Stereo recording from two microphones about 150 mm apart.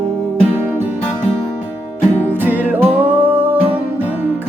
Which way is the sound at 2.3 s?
10° right (ahead or behind).